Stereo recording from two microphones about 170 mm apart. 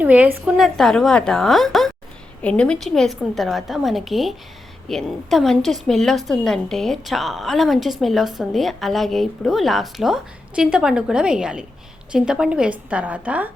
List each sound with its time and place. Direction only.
0.0 s a woman's voice: 10° right (ahead or behind)